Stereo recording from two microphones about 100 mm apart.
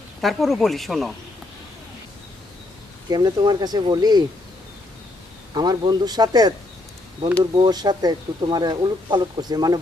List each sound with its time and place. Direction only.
0.2 s speech: centre (ahead or behind)
3.1 s speech: 45° right (ahead or behind)
5.5 s speech: 40° right (ahead or behind)
7.5 s speech: 45° right (ahead or behind)